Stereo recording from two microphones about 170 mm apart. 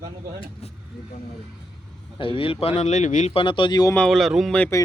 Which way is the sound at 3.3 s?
30° left (ahead or behind).